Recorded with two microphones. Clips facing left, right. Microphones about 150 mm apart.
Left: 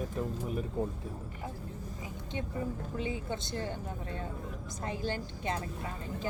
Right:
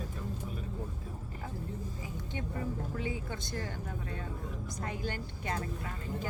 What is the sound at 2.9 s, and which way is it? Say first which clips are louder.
A woman's voice: left 2 dB; 20° left (ahead or behind).